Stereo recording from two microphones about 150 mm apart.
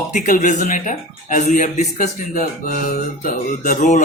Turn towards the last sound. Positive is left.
turn(degrees=55)  # may be behind; listen again after turning